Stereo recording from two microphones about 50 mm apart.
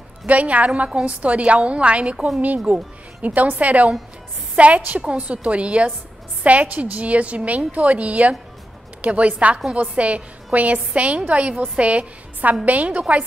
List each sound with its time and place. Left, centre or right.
0.3 s a woman's voice: right
2.1 s speech: centre
2.4 s a woman's voice: right